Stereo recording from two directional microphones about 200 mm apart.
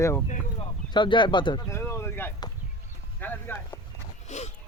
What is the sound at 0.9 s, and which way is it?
Bird, 25° left (ahead or behind).